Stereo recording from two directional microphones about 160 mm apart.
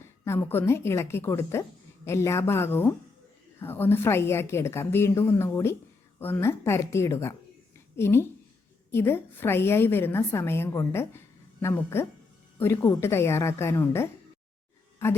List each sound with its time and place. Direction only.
0.0 s a woman's voice: 15° left (ahead or behind)